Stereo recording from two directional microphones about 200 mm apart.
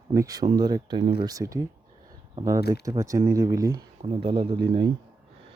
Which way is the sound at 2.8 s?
15° right (ahead or behind).